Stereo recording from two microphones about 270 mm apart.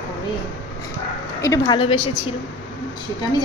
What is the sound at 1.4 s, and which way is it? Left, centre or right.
Speech, centre.